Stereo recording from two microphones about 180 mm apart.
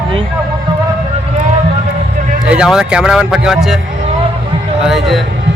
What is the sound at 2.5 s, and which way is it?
Speech, 5° right (ahead or behind).